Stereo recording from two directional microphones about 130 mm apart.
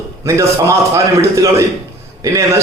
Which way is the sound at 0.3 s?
25° right (ahead or behind).